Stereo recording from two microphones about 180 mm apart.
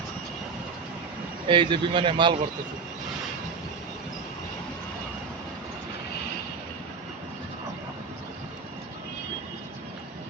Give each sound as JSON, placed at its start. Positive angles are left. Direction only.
{"t": 1.5, "sound": "speech", "side_deg": -25}